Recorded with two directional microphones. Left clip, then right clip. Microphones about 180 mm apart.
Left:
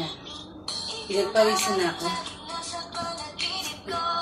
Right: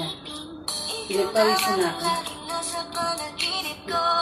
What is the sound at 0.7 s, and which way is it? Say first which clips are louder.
Music: right 2 dB; 60° right (ahead or behind).